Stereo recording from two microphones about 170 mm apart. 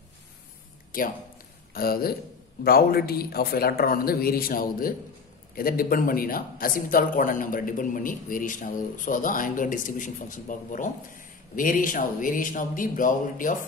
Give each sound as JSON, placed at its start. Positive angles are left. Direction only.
{"t": 0.9, "sound": "a man's voice", "side_deg": 55}